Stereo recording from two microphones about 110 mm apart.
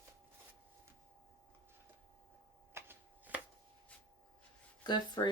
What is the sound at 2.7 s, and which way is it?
Shuffling cards, 15° right (ahead or behind).